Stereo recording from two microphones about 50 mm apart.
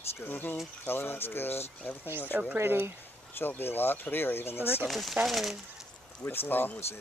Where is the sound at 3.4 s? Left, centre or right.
Left.